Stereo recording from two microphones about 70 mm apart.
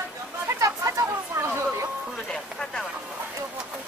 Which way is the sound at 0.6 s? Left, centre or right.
Right.